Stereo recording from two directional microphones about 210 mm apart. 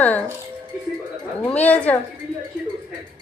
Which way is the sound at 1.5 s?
5° left (ahead or behind).